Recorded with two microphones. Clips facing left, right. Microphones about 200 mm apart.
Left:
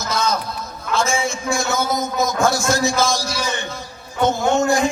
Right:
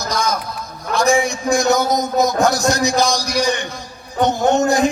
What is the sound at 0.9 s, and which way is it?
A man's voice, 15° right (ahead or behind).